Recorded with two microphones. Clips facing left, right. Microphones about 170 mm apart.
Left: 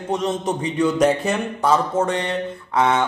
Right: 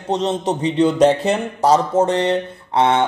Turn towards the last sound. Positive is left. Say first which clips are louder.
# right 3 dB
turn(degrees=-30)  # may be behind; listen again after turning